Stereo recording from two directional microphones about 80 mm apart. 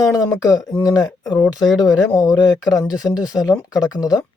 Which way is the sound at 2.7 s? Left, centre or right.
Left.